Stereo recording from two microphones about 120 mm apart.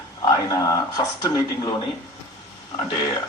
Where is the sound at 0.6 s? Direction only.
30° left (ahead or behind).